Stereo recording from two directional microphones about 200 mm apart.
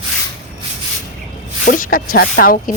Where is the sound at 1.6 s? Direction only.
45° left (ahead or behind).